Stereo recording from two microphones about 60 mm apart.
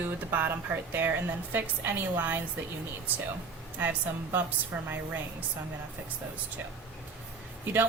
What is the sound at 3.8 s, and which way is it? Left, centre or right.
A woman's voice, right.